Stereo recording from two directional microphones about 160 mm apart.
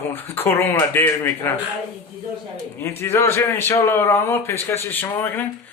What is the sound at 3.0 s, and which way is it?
A man's voice, 15° left (ahead or behind).